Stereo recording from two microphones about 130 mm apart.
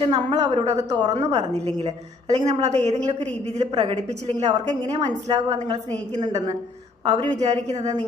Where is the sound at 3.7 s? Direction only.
35° right (ahead or behind).